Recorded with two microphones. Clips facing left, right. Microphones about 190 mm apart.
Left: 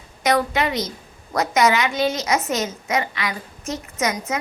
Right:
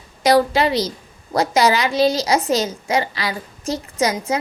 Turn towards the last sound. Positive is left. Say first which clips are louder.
# right 4 dB
turn(degrees=-30)  # may be behind; listen again after turning